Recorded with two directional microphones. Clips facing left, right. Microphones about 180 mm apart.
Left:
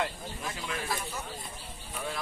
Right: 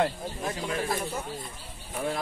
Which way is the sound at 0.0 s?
35° right (ahead or behind).